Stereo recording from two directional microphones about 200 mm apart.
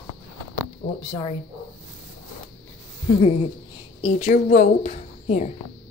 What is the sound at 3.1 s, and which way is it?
A woman's voice, 30° left (ahead or behind).